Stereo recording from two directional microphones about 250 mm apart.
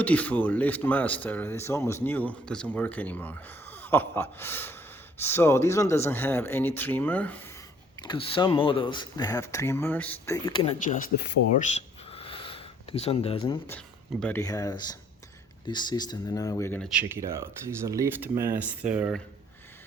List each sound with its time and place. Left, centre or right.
0.0 s speech: centre
7.9 s speech: centre
10.8 s speech: left
11.6 s a sound: left
13.7 s speech: centre
17.0 s speech: centre